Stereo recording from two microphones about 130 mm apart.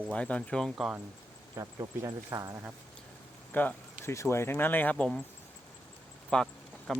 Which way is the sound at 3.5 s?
15° left (ahead or behind).